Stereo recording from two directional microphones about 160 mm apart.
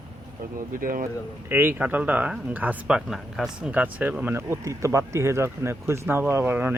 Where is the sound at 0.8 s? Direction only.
60° right (ahead or behind).